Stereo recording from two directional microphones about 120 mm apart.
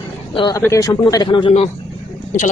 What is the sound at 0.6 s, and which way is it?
Speech, 25° left (ahead or behind).